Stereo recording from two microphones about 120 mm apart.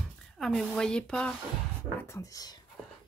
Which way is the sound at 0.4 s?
Centre (ahead or behind).